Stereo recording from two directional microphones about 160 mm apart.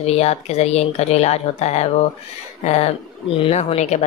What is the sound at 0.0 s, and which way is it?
Speech, 40° left (ahead or behind).